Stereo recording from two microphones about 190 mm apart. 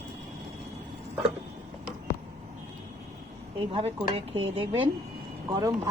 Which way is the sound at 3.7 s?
30° right (ahead or behind).